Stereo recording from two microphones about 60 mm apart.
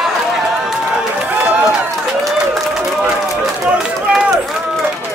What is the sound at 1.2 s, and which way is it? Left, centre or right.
Run, centre.